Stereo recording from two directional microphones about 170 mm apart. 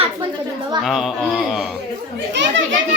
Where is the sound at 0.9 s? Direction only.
Centre (ahead or behind).